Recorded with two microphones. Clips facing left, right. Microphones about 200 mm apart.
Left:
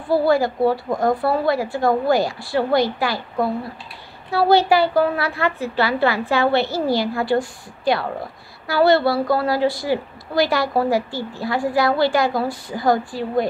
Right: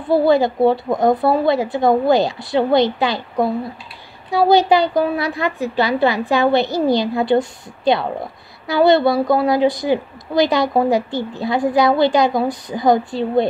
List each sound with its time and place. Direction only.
0.1 s a woman's voice: 20° right (ahead or behind)